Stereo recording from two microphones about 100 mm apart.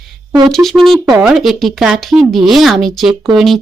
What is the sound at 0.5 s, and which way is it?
Speech, centre (ahead or behind).